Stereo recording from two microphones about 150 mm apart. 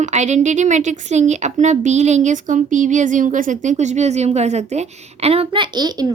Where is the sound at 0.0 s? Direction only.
50° right (ahead or behind).